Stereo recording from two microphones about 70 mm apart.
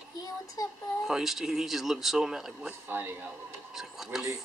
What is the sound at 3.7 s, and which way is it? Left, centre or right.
Speech, centre.